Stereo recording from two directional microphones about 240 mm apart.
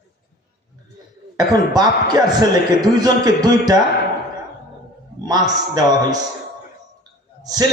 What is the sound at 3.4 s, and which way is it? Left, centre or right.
Speech, centre.